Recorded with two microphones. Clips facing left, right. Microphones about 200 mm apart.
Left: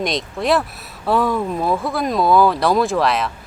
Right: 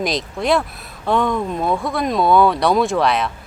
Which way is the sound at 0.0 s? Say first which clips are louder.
Even; centre (ahead or behind).